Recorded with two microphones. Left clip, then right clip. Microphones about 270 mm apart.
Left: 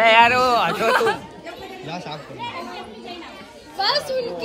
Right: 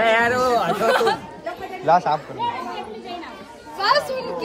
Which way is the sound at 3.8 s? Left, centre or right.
Centre.